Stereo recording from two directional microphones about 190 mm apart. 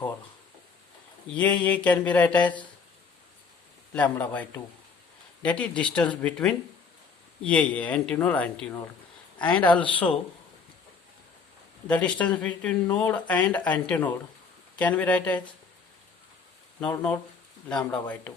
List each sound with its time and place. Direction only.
1.4 s speech: 10° left (ahead or behind)
3.9 s speech: 10° left (ahead or behind)
11.9 s speech: 5° left (ahead or behind)
16.8 s speech: 5° left (ahead or behind)